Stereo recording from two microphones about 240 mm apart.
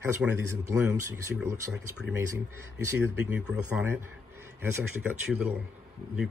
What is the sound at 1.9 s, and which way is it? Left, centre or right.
Speech, right.